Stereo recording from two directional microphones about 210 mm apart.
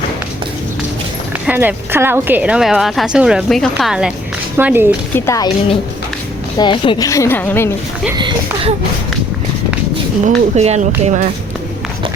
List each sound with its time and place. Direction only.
1.5 s a woman's voice: 10° right (ahead or behind)
5.1 s a woman's voice: 15° left (ahead or behind)
6.6 s a woman's voice: 20° left (ahead or behind)
10.2 s speech: 30° right (ahead or behind)